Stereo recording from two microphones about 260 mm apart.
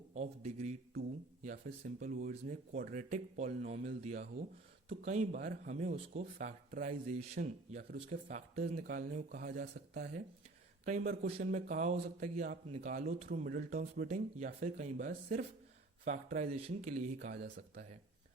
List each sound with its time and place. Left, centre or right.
0.1 s speech: right